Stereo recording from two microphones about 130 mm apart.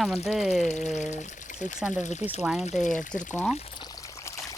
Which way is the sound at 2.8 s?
75° left (ahead or behind).